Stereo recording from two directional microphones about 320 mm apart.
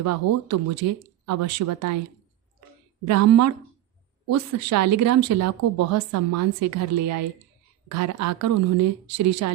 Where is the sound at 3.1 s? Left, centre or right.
Right.